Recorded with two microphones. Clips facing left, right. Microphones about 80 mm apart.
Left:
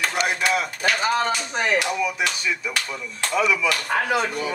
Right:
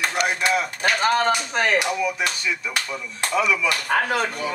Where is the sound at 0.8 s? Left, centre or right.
Right.